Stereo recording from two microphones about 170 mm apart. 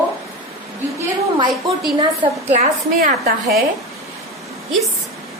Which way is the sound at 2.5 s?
55° right (ahead or behind).